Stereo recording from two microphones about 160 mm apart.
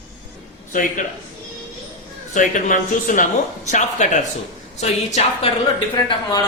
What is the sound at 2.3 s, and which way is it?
A woman's voice, 55° left (ahead or behind).